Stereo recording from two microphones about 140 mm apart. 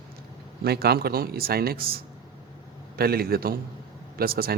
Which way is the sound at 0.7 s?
90° right.